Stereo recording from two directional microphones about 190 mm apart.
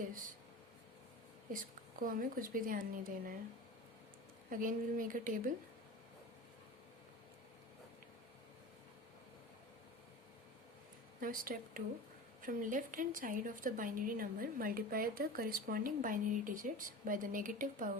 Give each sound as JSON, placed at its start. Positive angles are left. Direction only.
{"t": 1.5, "sound": "a woman's voice", "side_deg": -45}
{"t": 4.4, "sound": "a woman's voice", "side_deg": -45}
{"t": 11.2, "sound": "a woman's voice", "side_deg": -50}